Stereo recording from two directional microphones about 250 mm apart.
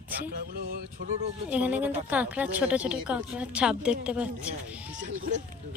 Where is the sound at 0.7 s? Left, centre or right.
Right.